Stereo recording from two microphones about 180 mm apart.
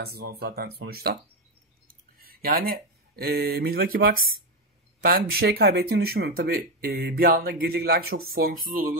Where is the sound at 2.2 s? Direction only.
55° right (ahead or behind).